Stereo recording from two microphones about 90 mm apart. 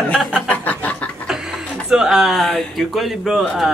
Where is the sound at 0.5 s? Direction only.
15° left (ahead or behind).